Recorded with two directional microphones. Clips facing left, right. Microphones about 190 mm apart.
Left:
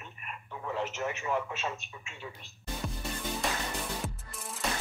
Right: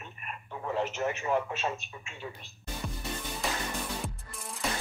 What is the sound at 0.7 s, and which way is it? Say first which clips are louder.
Speech: right 3 dB; 40° right (ahead or behind).